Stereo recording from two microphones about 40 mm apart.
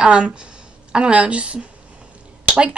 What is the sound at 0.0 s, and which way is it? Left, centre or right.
A woman's voice, right.